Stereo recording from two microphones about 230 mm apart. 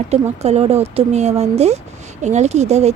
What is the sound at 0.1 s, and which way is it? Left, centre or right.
Speech, right.